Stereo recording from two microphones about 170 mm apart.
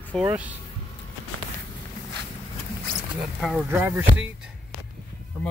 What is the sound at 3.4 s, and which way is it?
Speech, 5° right (ahead or behind).